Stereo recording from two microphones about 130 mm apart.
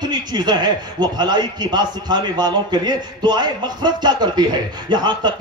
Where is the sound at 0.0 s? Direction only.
35° right (ahead or behind).